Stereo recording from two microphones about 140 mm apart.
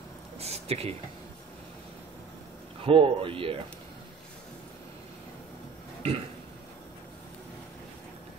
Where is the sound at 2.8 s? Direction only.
40° right (ahead or behind).